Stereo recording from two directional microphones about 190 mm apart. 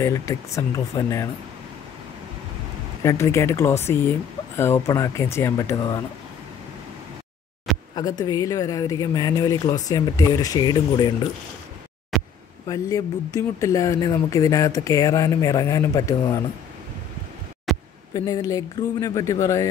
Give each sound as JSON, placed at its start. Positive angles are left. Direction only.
{"t": 0.3, "sound": "speech", "side_deg": 15}
{"t": 3.0, "sound": "speech", "side_deg": 15}
{"t": 7.9, "sound": "speech", "side_deg": 20}
{"t": 12.6, "sound": "speech", "side_deg": 20}
{"t": 17.7, "sound": "a sound", "side_deg": 0}
{"t": 18.1, "sound": "speech", "side_deg": 20}